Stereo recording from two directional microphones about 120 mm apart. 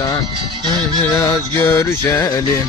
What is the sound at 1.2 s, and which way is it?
Music, 25° left (ahead or behind).